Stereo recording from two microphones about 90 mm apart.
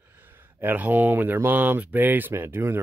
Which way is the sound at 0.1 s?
20° right (ahead or behind).